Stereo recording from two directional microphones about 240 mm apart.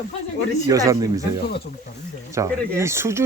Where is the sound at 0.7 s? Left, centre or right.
Centre.